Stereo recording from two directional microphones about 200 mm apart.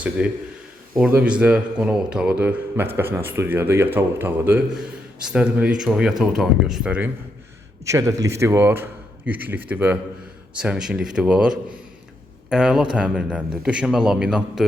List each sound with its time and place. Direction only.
0.2 s a man's voice: 5° right (ahead or behind)
7.9 s a man's voice: 15° right (ahead or behind)